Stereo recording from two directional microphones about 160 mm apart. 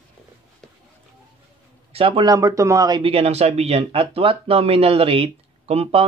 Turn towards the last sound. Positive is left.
turn(degrees=-40)  # may be behind; listen again after turning